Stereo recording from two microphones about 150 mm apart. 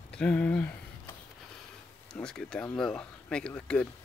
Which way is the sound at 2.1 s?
5° left (ahead or behind).